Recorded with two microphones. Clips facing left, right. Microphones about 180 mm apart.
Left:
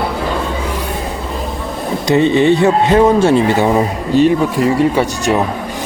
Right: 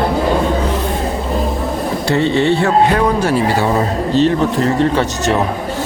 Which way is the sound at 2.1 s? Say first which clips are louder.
Left 4 dB; 15° left (ahead or behind).